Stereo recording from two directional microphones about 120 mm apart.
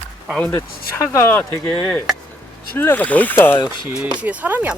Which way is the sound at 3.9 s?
5° right (ahead or behind).